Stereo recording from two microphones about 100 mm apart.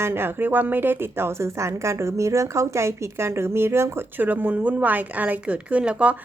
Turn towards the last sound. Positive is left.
turn(degrees=-15)  # may be behind; listen again after turning